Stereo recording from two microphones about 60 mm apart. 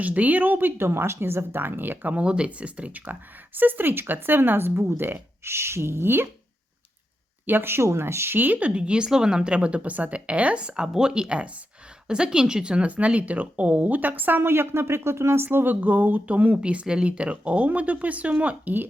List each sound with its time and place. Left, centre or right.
0.0 s speech: right
7.4 s speech: right
15.4 s speech: right